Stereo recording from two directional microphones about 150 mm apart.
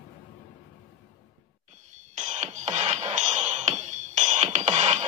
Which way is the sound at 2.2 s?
50° right (ahead or behind).